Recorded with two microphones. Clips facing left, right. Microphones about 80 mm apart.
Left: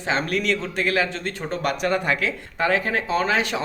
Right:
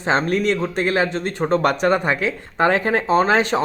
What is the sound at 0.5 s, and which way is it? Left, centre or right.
Speech, centre.